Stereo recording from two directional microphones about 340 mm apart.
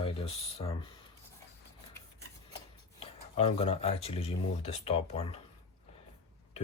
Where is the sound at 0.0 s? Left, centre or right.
Centre.